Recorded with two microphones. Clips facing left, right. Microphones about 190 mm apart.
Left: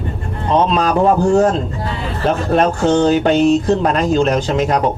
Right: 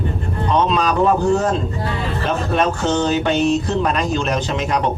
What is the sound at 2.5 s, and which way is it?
Speech, 35° left (ahead or behind).